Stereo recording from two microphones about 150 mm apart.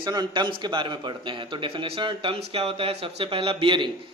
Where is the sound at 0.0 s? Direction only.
30° right (ahead or behind).